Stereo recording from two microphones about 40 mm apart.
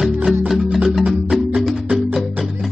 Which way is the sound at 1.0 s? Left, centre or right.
Centre.